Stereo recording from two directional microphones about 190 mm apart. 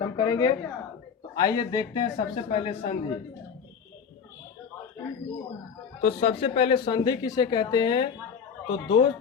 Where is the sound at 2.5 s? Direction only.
35° left (ahead or behind).